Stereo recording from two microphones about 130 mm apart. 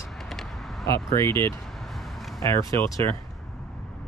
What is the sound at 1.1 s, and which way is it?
Speech, 20° left (ahead or behind).